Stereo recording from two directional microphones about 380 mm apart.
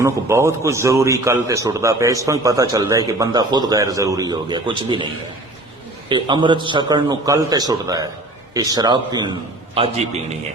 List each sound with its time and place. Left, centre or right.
0.0 s a man's voice: centre
6.1 s a man's voice: centre